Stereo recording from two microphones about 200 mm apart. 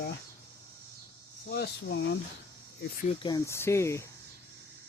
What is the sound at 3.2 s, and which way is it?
Speech, 15° left (ahead or behind).